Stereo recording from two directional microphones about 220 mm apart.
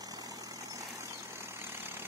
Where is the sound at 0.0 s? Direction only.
15° right (ahead or behind).